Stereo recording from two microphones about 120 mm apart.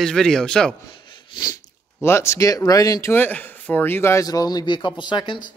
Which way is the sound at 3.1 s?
15° left (ahead or behind).